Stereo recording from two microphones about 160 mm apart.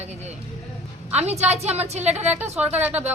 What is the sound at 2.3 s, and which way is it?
Speech, 10° right (ahead or behind).